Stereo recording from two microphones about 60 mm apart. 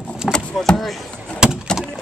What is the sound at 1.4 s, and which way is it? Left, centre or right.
Door, centre.